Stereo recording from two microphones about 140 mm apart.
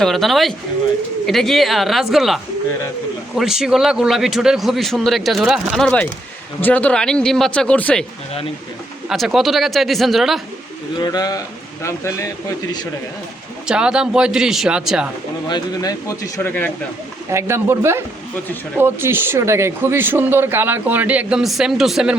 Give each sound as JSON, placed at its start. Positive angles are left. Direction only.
{"t": 0.0, "sound": "a man's voice", "side_deg": 0}
{"t": 9.0, "sound": "a man's voice", "side_deg": 0}
{"t": 11.0, "sound": "speech", "side_deg": 25}
{"t": 13.7, "sound": "a man's voice", "side_deg": -5}
{"t": 15.4, "sound": "speech", "side_deg": 30}
{"t": 17.3, "sound": "speech", "side_deg": -20}